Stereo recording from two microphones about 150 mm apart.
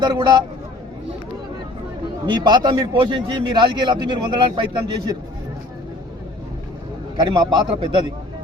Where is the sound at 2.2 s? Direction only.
30° right (ahead or behind).